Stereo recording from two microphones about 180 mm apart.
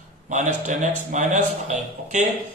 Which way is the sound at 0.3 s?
45° right (ahead or behind).